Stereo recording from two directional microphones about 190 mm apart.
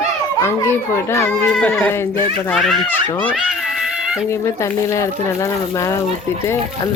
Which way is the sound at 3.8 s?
5° right (ahead or behind).